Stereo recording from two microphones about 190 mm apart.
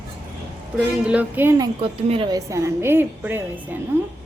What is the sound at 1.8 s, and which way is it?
Speech, 30° right (ahead or behind).